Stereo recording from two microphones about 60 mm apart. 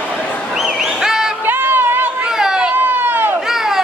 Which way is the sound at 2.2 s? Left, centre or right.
Centre.